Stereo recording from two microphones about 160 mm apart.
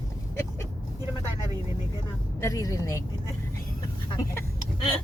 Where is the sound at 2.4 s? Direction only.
20° left (ahead or behind).